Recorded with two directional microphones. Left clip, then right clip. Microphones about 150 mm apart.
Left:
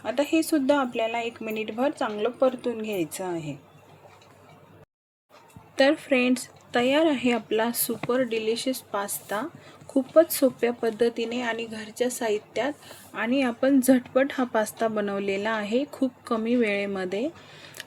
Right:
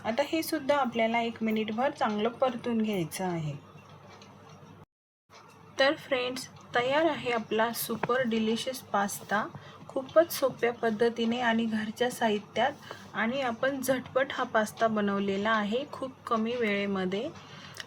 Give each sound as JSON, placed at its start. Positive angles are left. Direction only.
{"t": 0.0, "sound": "a woman's voice", "side_deg": 40}
{"t": 5.7, "sound": "a woman's voice", "side_deg": 40}